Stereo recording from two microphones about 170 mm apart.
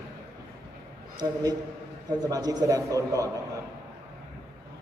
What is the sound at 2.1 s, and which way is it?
A man's voice, 25° right (ahead or behind).